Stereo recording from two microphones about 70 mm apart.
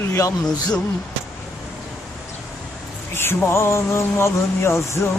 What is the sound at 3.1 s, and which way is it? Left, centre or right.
Speech, left.